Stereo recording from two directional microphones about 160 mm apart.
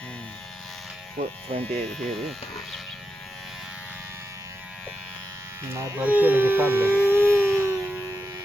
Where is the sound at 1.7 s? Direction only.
5° left (ahead or behind).